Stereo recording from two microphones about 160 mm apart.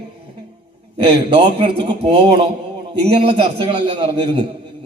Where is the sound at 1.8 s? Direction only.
35° right (ahead or behind).